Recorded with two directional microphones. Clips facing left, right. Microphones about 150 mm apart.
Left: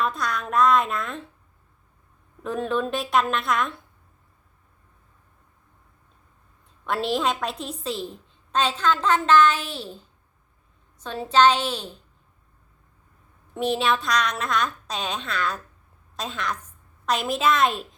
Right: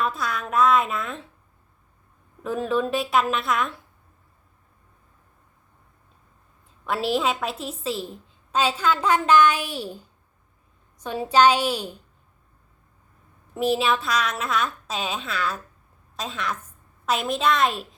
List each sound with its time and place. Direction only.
0.0 s a woman's voice: centre (ahead or behind)
2.4 s a woman's voice: centre (ahead or behind)
6.8 s a woman's voice: centre (ahead or behind)
13.5 s a woman's voice: 5° right (ahead or behind)